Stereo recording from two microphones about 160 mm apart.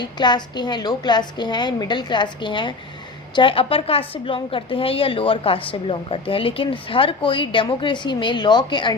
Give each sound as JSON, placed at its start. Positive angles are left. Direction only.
{"t": 0.0, "sound": "a woman's voice", "side_deg": 25}